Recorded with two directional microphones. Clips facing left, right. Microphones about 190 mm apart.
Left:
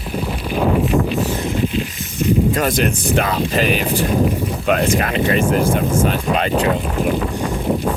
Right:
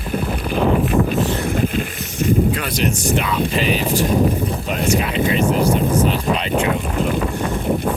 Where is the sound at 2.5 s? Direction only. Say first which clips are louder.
Left 3 dB; 45° left (ahead or behind).